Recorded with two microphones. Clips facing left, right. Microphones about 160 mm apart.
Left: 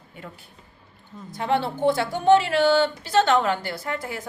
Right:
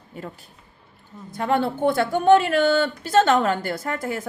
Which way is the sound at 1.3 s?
50° right (ahead or behind).